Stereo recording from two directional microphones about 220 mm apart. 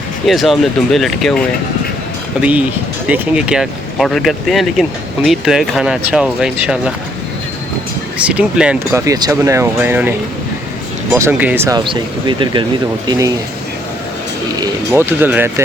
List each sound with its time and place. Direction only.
0.3 s speech: centre (ahead or behind)
8.3 s speech: 5° right (ahead or behind)
14.6 s speech: 10° right (ahead or behind)